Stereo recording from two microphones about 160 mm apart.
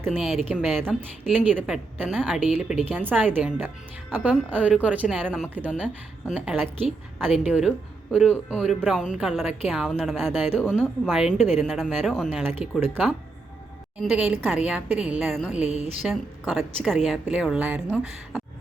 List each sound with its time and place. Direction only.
0.1 s a woman's voice: centre (ahead or behind)
5.1 s speech: centre (ahead or behind)
5.5 s a woman's voice: 10° right (ahead or behind)
11.3 s a woman's voice: 45° left (ahead or behind)
11.6 s speech: centre (ahead or behind)
12.4 s a woman's voice: 15° right (ahead or behind)
14.0 s speech: centre (ahead or behind)
14.3 s a woman's voice: 10° right (ahead or behind)
15.7 s a woman's voice: 40° right (ahead or behind)
16.0 s speech: centre (ahead or behind)